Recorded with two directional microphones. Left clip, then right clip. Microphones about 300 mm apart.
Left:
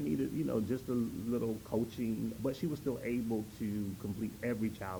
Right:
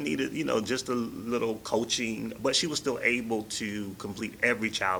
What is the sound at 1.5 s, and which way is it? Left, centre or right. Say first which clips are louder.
Speech: right 8 dB; right.